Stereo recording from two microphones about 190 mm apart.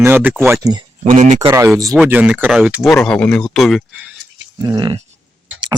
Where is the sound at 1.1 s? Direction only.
40° right (ahead or behind).